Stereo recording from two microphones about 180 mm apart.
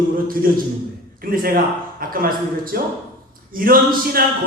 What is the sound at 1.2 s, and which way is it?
Speech, 55° right (ahead or behind).